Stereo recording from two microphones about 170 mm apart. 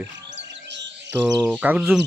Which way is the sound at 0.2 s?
90° right.